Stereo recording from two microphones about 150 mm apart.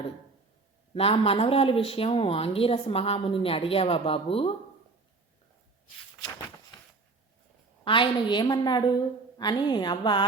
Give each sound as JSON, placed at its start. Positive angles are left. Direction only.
{"t": 0.9, "sound": "a woman's voice", "side_deg": 40}
{"t": 7.9, "sound": "a woman's voice", "side_deg": 35}